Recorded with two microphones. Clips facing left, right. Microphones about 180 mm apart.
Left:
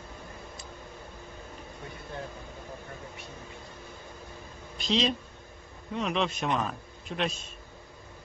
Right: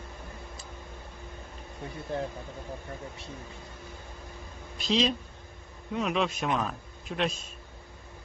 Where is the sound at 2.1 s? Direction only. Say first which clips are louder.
Right 7 dB; 35° right (ahead or behind).